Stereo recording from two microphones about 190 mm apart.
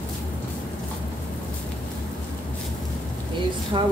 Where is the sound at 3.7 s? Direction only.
25° right (ahead or behind).